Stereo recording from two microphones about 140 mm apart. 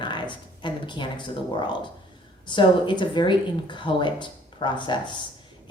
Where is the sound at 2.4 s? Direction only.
35° left (ahead or behind).